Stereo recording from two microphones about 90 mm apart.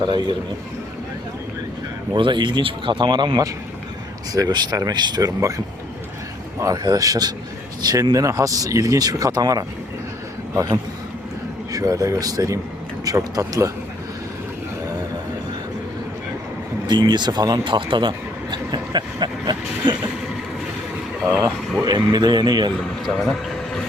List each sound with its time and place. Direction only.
0.0 s speech: 55° right (ahead or behind)
2.1 s speech: 60° right (ahead or behind)
6.6 s speech: 40° right (ahead or behind)
11.7 s speech: 40° right (ahead or behind)
16.8 s speech: 55° right (ahead or behind)
18.5 s a sound: 55° right (ahead or behind)
21.2 s speech: 35° right (ahead or behind)
23.0 s a sound: centre (ahead or behind)